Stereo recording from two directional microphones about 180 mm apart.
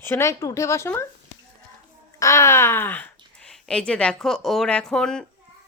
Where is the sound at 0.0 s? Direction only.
15° left (ahead or behind).